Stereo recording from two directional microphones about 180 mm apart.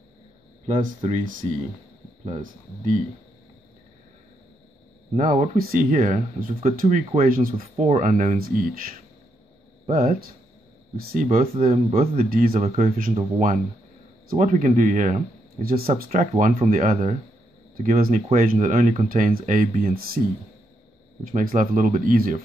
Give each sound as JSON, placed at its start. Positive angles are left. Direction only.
{"t": 1.0, "sound": "speech", "side_deg": -45}
{"t": 5.1, "sound": "speech", "side_deg": -45}
{"t": 11.6, "sound": "speech", "side_deg": -35}
{"t": 12.2, "sound": "speech", "side_deg": -50}
{"t": 21.3, "sound": "speech", "side_deg": -45}